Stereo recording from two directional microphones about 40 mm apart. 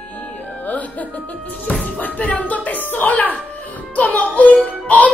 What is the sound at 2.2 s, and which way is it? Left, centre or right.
Music, left.